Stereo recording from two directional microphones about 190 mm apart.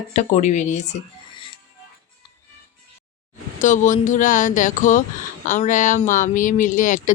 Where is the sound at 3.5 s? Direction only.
40° left (ahead or behind).